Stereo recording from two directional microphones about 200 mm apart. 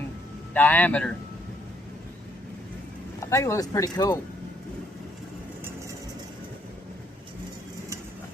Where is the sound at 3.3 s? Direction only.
15° left (ahead or behind).